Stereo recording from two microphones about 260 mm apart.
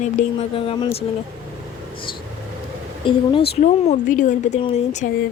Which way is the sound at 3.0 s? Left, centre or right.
Centre.